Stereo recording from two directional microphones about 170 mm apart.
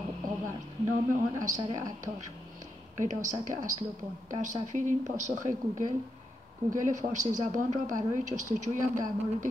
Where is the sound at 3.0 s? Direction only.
45° right (ahead or behind).